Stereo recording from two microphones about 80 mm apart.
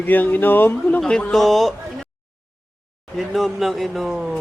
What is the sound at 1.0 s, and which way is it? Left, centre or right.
Speech, centre.